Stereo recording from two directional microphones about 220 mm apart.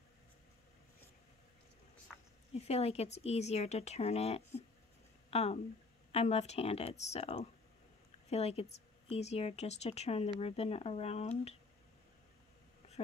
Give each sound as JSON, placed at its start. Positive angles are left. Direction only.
{"t": 2.5, "sound": "speech", "side_deg": 30}